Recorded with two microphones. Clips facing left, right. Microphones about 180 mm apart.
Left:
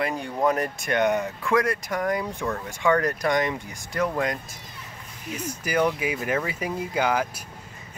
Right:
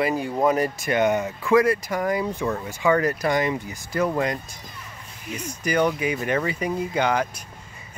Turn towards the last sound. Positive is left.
turn(degrees=5)  # may be behind; listen again after turning